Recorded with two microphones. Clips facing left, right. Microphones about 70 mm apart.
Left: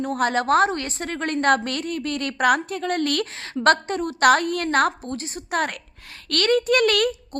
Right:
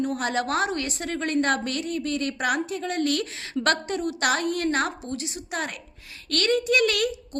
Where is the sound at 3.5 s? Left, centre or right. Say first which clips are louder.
Left 5 dB; left.